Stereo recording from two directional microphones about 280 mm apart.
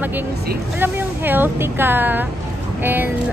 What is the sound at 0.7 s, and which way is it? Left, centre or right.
A woman's voice, centre.